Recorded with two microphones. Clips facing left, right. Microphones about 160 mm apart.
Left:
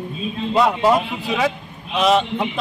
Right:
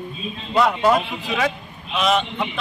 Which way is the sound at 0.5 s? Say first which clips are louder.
Left 1 dB; 20° left (ahead or behind).